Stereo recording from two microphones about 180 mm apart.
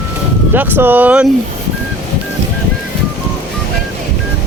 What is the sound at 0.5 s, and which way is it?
Speech, 10° right (ahead or behind).